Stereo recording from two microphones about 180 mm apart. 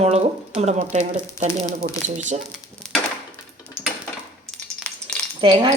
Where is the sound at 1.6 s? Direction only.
20° left (ahead or behind).